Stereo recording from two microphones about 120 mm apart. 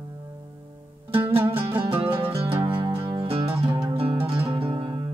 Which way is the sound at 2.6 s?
45° right (ahead or behind).